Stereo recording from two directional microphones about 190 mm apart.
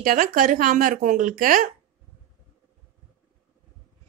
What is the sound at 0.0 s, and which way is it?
Speech, 45° right (ahead or behind).